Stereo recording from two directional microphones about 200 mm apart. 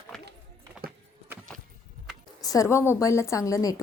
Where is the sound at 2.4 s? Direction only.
15° left (ahead or behind).